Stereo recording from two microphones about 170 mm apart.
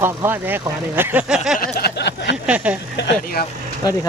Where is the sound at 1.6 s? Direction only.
65° left (ahead or behind); by 2.4 s 90° left.